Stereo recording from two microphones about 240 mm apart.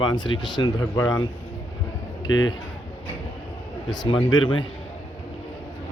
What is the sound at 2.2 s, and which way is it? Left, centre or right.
Speech, left.